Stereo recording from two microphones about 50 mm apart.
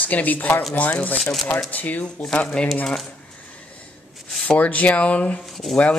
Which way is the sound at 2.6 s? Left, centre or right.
Centre.